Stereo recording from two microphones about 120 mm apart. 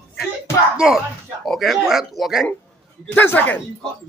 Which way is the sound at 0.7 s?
5° right (ahead or behind).